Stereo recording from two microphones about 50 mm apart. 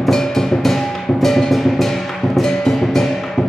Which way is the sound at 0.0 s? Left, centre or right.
Centre.